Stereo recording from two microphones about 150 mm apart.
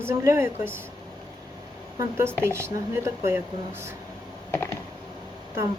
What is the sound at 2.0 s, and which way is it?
Speech, 15° right (ahead or behind).